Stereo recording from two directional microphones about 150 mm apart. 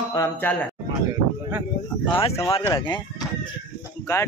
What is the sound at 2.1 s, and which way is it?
Speech, 40° left (ahead or behind).